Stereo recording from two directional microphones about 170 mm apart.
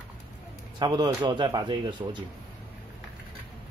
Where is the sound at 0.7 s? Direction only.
25° right (ahead or behind).